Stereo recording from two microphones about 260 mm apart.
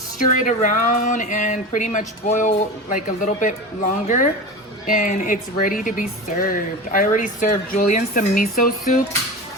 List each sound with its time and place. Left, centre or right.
0.3 s a woman's voice: left